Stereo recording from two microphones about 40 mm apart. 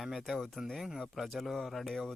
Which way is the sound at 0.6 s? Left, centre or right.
Centre.